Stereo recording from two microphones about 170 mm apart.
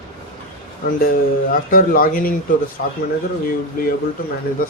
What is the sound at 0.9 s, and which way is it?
Speech, 60° left (ahead or behind).